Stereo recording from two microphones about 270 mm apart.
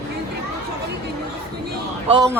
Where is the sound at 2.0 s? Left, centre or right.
Centre.